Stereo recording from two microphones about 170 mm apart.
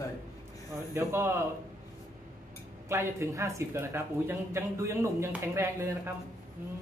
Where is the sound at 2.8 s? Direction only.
15° right (ahead or behind).